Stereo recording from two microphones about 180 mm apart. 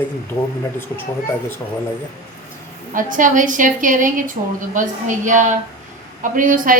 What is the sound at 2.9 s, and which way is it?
Speech, 45° right (ahead or behind).